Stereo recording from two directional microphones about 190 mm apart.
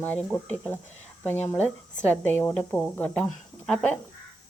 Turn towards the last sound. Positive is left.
turn(degrees=5)  # may be behind; listen again after turning